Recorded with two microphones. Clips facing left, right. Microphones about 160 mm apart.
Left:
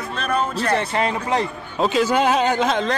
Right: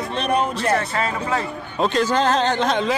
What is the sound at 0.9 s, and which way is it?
Speech, 20° left (ahead or behind).